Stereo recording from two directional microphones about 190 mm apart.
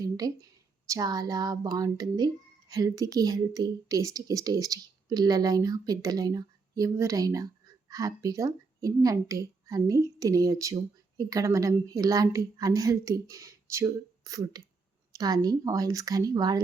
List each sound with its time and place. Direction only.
0.0 s a child's voice: 20° right (ahead or behind)